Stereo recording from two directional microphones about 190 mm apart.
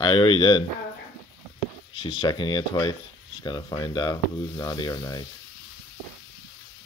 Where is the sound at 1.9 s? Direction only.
25° left (ahead or behind).